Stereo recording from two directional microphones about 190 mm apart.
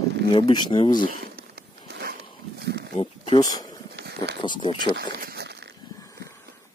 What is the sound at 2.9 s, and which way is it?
Speech, 20° left (ahead or behind).